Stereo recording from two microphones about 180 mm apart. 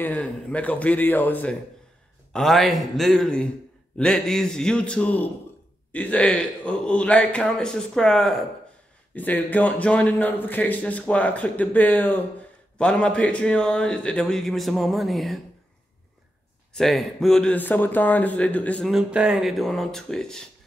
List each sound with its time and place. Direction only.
0.0 s speech: 5° left (ahead or behind)
16.7 s speech: centre (ahead or behind)